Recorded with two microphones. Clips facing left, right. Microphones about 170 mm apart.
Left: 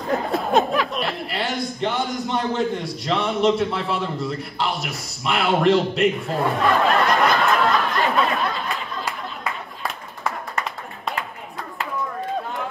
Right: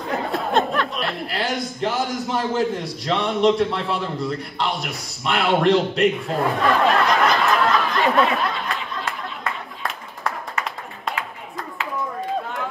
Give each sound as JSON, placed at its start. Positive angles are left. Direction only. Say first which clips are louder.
{"t": 0.1, "sound": "chuckle", "louder": "left 2 dB", "side_deg": 0}